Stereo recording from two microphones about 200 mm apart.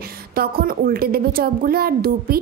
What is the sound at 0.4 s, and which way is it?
A woman's voice, 45° right (ahead or behind).